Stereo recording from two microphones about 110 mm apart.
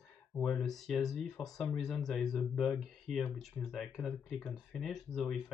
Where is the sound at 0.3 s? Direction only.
5° left (ahead or behind).